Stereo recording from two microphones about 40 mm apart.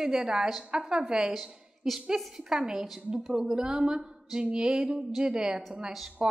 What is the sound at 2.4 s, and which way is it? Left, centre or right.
Speech, centre.